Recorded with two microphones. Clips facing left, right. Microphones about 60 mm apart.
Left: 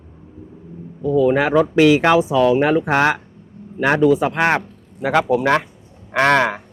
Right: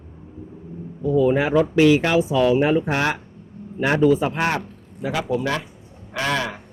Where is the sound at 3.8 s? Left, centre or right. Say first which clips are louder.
Left 3 dB; left.